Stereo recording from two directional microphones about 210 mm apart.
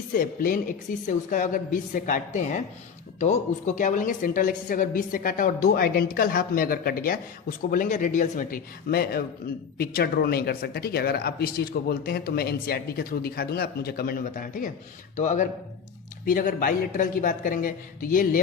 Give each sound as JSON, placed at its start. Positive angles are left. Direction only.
{"t": 0.1, "sound": "a woman's voice", "side_deg": 40}